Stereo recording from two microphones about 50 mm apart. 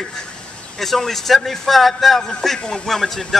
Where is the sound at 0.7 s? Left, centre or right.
Centre.